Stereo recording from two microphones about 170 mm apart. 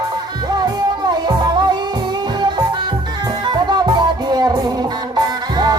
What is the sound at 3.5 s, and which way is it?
Music, 25° right (ahead or behind).